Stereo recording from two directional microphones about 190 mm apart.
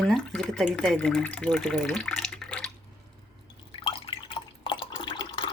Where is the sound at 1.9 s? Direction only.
Centre (ahead or behind).